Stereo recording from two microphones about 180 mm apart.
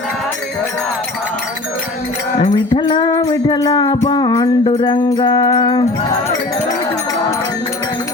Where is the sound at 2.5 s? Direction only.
25° left (ahead or behind).